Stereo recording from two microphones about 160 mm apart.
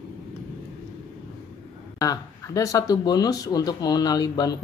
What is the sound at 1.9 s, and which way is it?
Speech, 20° left (ahead or behind).